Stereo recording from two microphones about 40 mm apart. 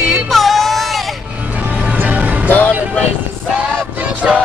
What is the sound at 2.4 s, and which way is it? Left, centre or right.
Music, left.